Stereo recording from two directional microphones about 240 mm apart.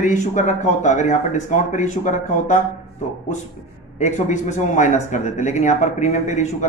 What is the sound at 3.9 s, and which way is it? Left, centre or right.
Speech, left.